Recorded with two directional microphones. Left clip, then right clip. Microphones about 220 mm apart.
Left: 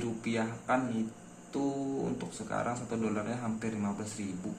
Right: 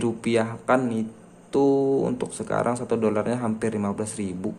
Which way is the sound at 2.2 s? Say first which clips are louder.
Right 10 dB; 50° right (ahead or behind).